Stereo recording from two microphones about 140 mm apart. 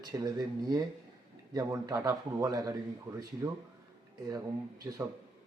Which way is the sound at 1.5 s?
25° right (ahead or behind).